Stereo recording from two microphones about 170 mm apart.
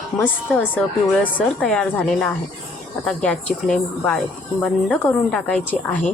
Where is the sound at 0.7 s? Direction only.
10° left (ahead or behind).